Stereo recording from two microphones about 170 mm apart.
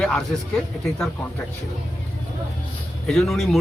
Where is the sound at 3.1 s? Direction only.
Centre (ahead or behind).